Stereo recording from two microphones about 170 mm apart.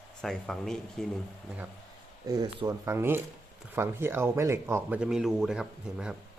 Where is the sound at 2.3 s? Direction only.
25° right (ahead or behind).